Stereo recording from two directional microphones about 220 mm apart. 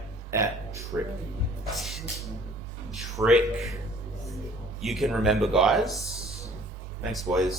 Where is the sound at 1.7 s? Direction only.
Centre (ahead or behind).